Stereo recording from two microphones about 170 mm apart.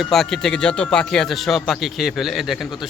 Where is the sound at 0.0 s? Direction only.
Centre (ahead or behind).